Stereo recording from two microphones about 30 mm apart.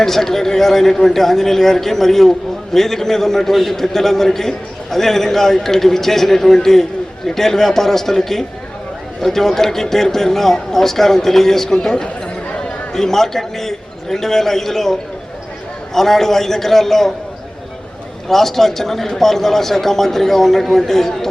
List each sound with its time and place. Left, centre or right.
0.0 s a man's voice: centre
11.7 s a man's voice: left
16.0 s a man's voice: centre
18.3 s a man's voice: centre